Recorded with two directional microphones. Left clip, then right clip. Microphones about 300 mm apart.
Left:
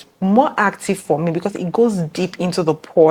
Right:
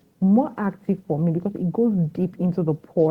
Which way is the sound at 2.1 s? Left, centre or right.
Centre.